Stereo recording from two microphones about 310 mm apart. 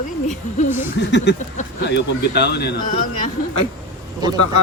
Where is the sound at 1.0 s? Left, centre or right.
Left.